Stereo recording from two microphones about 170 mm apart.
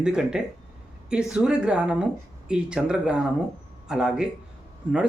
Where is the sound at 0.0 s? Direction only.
5° right (ahead or behind).